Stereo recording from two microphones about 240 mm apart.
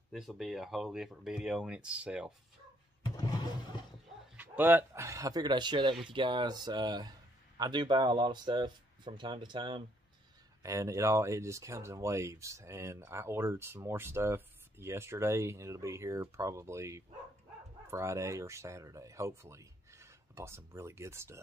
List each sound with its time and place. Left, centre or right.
0.1 s speech: centre
4.4 s speech: centre